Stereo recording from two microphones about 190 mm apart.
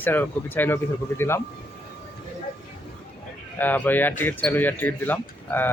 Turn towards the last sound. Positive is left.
turn(degrees=10)  # may be behind; listen again after turning